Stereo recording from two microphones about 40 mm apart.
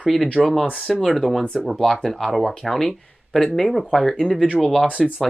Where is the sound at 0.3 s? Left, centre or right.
Centre.